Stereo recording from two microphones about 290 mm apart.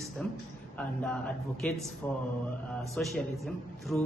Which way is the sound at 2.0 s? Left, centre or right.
Centre.